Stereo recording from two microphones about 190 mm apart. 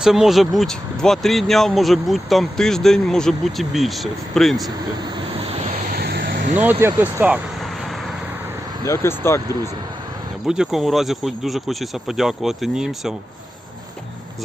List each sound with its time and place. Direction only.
0.0 s speech: centre (ahead or behind)
5.9 s vehicle: 55° right (ahead or behind)
6.7 s speech: 10° right (ahead or behind)
8.8 s speech: 15° left (ahead or behind)
10.4 s speech: 5° right (ahead or behind)